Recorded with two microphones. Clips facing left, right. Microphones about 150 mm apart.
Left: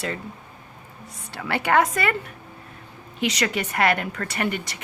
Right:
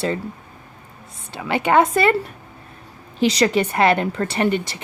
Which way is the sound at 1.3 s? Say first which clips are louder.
Right 4 dB; 20° right (ahead or behind).